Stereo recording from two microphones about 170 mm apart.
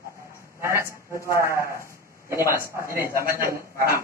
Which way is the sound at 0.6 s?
15° right (ahead or behind).